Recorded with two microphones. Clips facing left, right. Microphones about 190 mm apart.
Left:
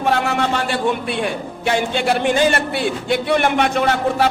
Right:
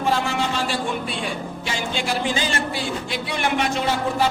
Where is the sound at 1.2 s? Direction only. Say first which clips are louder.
Left 6 dB; 60° left (ahead or behind).